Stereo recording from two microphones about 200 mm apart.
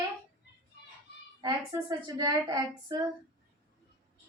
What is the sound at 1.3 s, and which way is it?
Child singing, 20° right (ahead or behind).